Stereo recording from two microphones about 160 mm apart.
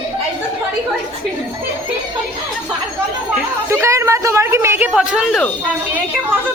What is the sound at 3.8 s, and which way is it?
A man's voice, 15° right (ahead or behind).